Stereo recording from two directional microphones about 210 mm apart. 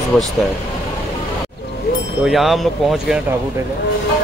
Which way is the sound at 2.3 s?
Centre (ahead or behind).